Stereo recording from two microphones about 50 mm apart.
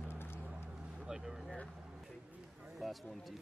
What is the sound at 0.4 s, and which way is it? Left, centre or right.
Vehicle, right.